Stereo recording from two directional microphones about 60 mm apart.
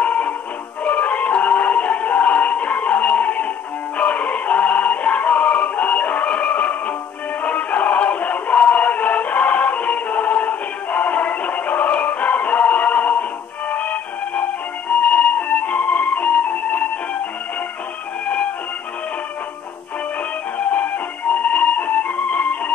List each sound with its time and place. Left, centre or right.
0.0 s music: left
18.2 s music: left
20.5 s music: left